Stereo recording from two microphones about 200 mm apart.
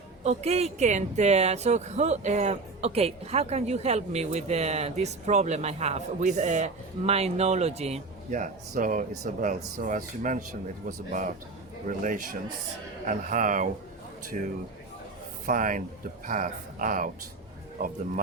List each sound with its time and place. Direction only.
0.3 s speech: 30° right (ahead or behind)